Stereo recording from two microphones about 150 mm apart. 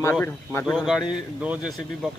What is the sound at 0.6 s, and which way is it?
Speech, 5° left (ahead or behind).